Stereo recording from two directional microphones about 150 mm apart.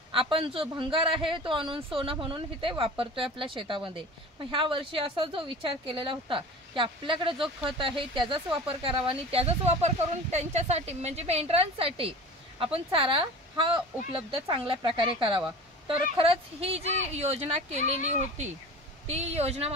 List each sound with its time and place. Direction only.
0.1 s speech: 35° right (ahead or behind)